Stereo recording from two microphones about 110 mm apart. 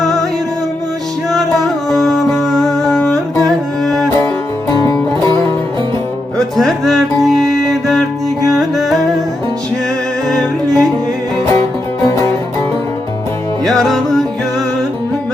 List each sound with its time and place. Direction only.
0.0 s music: 5° left (ahead or behind)
1.3 s music: centre (ahead or behind)
4.7 s music: 30° left (ahead or behind)
6.3 s music: 5° left (ahead or behind)
10.2 s music: 5° left (ahead or behind)
13.7 s music: centre (ahead or behind)